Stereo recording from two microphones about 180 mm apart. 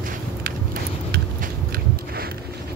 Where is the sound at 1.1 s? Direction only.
60° right (ahead or behind).